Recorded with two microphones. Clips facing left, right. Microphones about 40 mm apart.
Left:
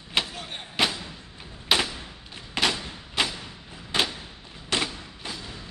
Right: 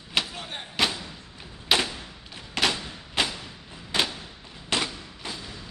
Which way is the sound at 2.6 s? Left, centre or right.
Centre.